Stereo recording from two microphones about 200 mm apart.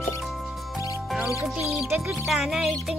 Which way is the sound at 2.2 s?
Centre (ahead or behind).